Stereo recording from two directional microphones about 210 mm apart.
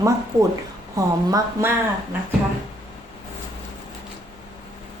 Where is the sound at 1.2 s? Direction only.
15° right (ahead or behind).